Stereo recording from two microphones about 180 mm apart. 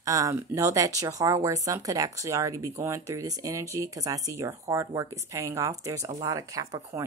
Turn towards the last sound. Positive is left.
turn(degrees=-15)  # may be behind; listen again after turning